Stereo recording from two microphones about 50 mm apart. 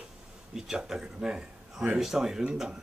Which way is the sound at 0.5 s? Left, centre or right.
Centre.